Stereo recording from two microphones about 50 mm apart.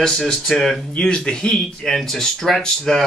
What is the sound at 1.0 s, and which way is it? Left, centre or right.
Speech, centre.